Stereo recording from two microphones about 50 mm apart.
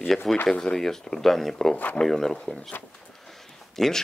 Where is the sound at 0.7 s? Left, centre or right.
Centre.